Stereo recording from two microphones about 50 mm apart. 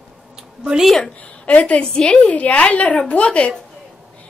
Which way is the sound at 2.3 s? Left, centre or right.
Left.